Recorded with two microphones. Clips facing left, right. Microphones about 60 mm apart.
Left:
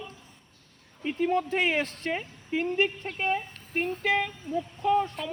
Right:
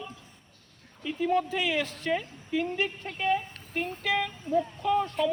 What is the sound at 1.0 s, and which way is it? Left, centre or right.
Speech, left.